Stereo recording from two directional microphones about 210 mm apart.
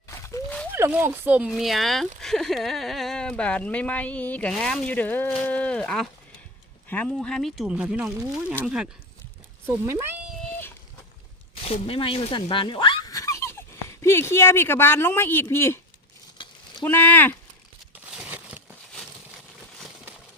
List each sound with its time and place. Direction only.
0.1 s a sound: 15° left (ahead or behind)
0.7 s speech: 10° right (ahead or behind)
11.6 s speech: 30° left (ahead or behind); by 15.8 s 10° left (ahead or behind)
16.4 s a sound: 25° left (ahead or behind)
16.8 s speech: 10° left (ahead or behind)
17.9 s crumpling: 5° right (ahead or behind)